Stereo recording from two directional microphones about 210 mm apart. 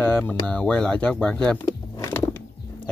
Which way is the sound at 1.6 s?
15° left (ahead or behind).